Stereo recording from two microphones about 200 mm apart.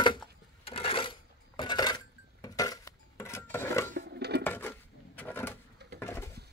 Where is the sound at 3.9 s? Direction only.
55° right (ahead or behind).